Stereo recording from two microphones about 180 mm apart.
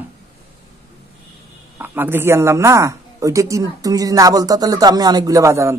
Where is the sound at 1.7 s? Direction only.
10° right (ahead or behind).